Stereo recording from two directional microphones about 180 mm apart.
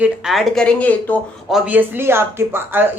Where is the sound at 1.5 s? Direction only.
10° right (ahead or behind).